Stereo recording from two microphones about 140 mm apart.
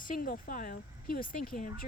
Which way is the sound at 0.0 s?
75° left (ahead or behind).